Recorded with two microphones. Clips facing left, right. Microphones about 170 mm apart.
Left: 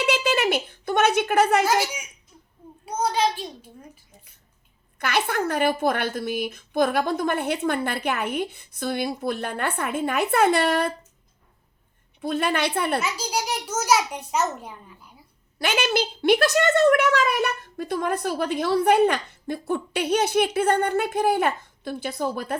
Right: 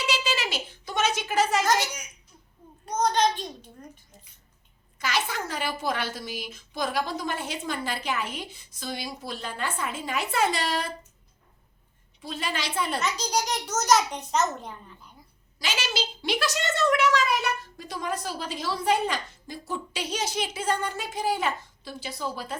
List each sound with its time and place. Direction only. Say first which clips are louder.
0.0 s a woman's voice: left 7 dB; 55° left (ahead or behind)
1.6 s a child's voice: left 3 dB; 10° left (ahead or behind)
4.9 s a woman's voice: left 5 dB; 60° left (ahead or behind)
12.2 s a woman's voice: left 9 dB; 55° left (ahead or behind)
13.0 s a child's voice: even; 5° left (ahead or behind)
15.5 s a woman's voice: left 8 dB; 60° left (ahead or behind)